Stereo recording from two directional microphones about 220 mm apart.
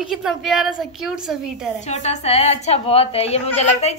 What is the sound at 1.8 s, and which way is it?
A woman's voice, 30° left (ahead or behind).